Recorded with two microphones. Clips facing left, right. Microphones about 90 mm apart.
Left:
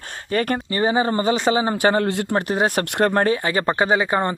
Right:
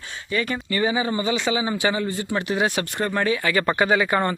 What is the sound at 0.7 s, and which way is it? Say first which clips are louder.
Speech: left 2 dB; 40° left (ahead or behind).